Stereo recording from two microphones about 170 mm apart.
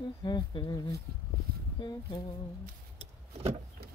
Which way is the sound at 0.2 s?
25° left (ahead or behind).